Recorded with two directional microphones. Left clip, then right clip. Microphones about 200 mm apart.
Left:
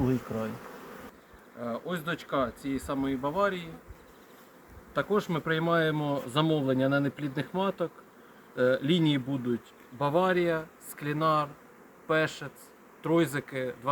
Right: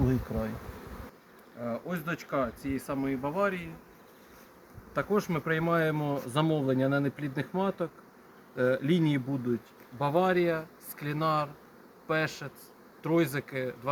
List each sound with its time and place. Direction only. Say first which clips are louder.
0.0 s bee: left 1 dB; 10° right (ahead or behind)
1.6 s speech: left 1 dB; centre (ahead or behind)
4.9 s speech: left 1 dB; centre (ahead or behind)